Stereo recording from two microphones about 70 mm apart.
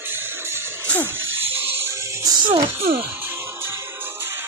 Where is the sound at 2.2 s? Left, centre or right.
Right.